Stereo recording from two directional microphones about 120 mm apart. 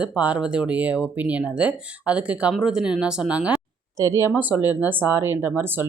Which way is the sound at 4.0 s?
25° right (ahead or behind).